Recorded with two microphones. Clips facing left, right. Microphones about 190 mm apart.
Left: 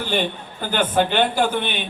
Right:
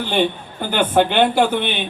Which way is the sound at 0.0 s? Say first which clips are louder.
Right 4 dB; 65° right (ahead or behind).